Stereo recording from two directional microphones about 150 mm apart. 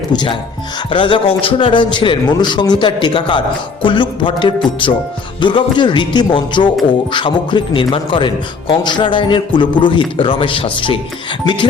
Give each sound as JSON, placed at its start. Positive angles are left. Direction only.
{"t": 0.1, "sound": "a man's voice", "side_deg": 30}